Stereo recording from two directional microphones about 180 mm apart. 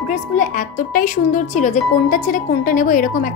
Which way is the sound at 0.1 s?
45° left (ahead or behind).